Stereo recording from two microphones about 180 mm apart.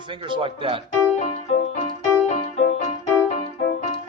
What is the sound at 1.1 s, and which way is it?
Music, 40° left (ahead or behind).